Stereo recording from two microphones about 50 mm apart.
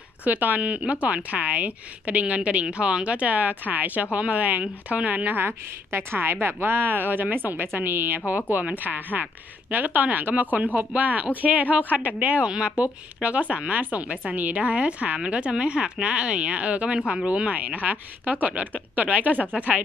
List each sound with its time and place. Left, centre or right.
0.2 s a woman's voice: right
5.9 s a woman's voice: right; by 17.3 s centre
17.3 s a woman's voice: right